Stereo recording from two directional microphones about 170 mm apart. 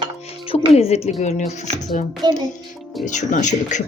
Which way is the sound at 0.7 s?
40° left (ahead or behind).